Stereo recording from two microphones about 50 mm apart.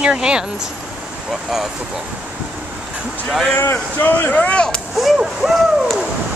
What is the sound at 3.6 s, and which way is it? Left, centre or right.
Speech, left.